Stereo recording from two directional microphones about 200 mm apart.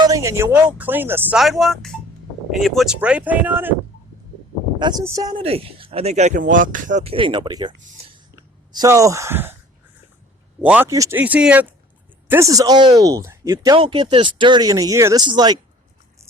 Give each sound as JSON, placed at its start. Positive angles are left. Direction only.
{"t": 0.0, "sound": "speech", "side_deg": -15}
{"t": 4.8, "sound": "speech", "side_deg": -20}
{"t": 10.6, "sound": "speech", "side_deg": -10}